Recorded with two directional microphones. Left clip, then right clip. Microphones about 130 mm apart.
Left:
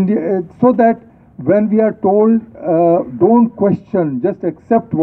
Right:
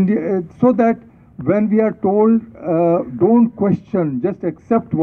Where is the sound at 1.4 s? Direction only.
30° right (ahead or behind).